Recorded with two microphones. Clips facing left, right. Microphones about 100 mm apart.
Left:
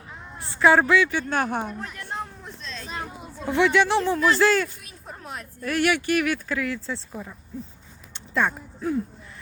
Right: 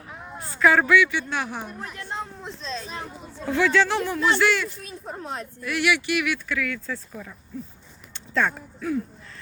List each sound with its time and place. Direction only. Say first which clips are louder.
0.5 s speech: left 1 dB; 25° left (ahead or behind)
1.3 s speech: left 5 dB; 50° left (ahead or behind)
2.1 s speech: right 1 dB; 25° right (ahead or behind)
3.4 s speech: left 1 dB; 20° left (ahead or behind)
4.4 s speech: left 2 dB; 35° left (ahead or behind)
4.8 s speech: right 6 dB; 30° right (ahead or behind)
5.6 s speech: left 2 dB; 45° left (ahead or behind)
6.6 s speech: left 1 dB; 30° left (ahead or behind)